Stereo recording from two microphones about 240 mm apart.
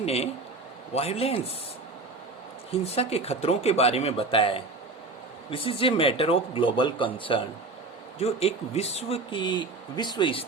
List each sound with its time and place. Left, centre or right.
0.0 s speech: left
2.8 s speech: left